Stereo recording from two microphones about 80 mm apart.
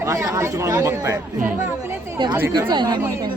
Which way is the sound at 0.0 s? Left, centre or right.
Right.